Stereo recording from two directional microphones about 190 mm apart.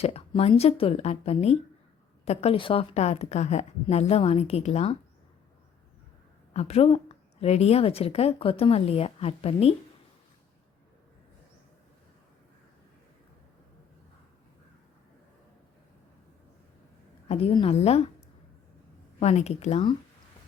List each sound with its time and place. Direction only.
0.0 s a woman's voice: 30° left (ahead or behind)
6.5 s a woman's voice: 35° left (ahead or behind)
17.2 s a woman's voice: 30° left (ahead or behind)
19.2 s a woman's voice: 35° left (ahead or behind)